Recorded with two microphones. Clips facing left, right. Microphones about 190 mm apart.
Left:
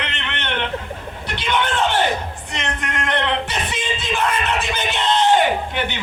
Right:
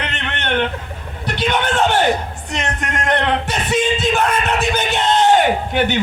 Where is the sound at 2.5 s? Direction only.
45° right (ahead or behind).